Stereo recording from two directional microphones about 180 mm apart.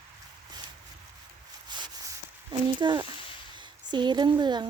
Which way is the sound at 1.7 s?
25° right (ahead or behind).